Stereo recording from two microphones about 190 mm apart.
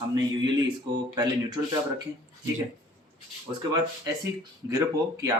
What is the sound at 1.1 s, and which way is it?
Speech, 20° right (ahead or behind).